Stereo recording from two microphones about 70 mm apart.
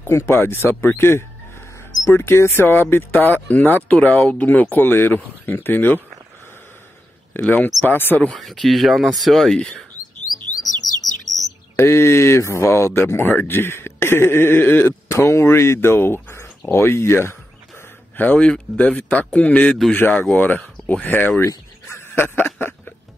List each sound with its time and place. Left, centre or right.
0.1 s speech: left
0.8 s a sound: left
2.0 s speech: left
7.4 s speech: left
8.3 s speech: centre
10.3 s chirp: left
11.3 s bird: centre
11.7 s speech: left
15.0 s speech: left
16.7 s a sound: left
18.2 s speech: left
20.6 s a sound: centre
20.9 s speech: left
21.8 s a sound: left